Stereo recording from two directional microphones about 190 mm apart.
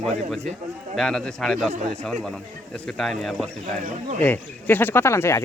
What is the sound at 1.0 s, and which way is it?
Speech, centre (ahead or behind).